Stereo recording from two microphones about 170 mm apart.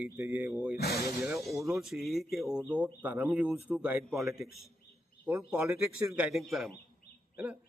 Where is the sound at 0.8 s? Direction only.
65° left (ahead or behind).